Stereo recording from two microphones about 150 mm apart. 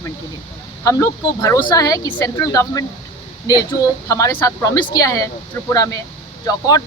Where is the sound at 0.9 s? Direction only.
20° left (ahead or behind).